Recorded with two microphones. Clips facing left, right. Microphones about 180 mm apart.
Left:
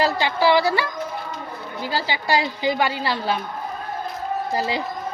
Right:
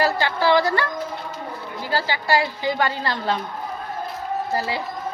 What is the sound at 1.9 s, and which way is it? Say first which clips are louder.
A woman's voice: right 1 dB; 15° left (ahead or behind).